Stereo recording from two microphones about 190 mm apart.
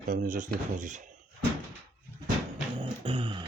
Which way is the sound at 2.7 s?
25° right (ahead or behind).